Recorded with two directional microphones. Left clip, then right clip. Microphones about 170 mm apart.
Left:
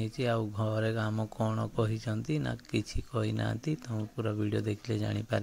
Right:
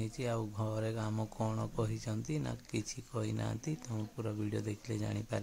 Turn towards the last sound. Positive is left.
turn(degrees=20)  # may be behind; listen again after turning